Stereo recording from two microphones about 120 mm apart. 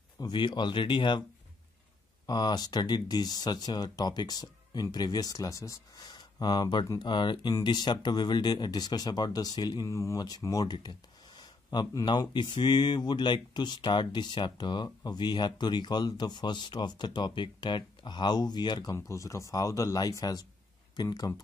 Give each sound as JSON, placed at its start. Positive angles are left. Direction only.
{"t": 0.2, "sound": "speech", "side_deg": 40}
{"t": 2.2, "sound": "speech", "side_deg": 35}
{"t": 18.9, "sound": "speech", "side_deg": 25}